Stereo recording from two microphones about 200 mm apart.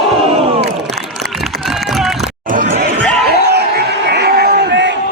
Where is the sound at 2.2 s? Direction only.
40° right (ahead or behind).